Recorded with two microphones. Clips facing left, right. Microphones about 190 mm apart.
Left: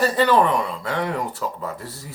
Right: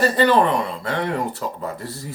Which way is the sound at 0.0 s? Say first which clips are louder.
Right 1 dB; 5° left (ahead or behind).